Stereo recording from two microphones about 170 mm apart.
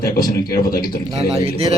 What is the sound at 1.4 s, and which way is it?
Speech, 35° right (ahead or behind).